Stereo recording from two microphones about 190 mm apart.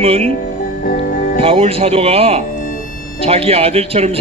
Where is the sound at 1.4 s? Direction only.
30° right (ahead or behind).